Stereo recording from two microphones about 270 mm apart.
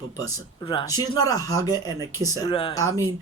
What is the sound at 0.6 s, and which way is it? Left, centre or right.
Speech, centre.